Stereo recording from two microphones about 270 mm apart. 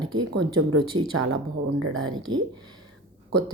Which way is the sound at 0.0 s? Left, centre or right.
Centre.